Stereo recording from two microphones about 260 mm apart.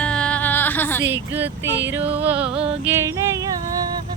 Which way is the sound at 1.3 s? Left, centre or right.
Centre.